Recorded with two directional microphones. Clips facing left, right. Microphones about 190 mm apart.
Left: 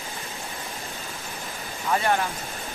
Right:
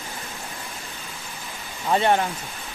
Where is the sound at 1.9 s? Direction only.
25° right (ahead or behind).